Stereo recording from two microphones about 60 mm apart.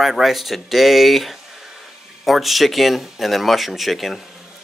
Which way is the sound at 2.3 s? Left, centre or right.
Centre.